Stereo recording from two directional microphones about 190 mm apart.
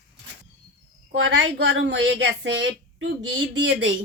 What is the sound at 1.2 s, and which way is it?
Speech, 80° right.